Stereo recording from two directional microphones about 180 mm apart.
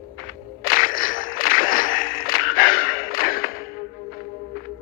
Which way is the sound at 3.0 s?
50° left (ahead or behind).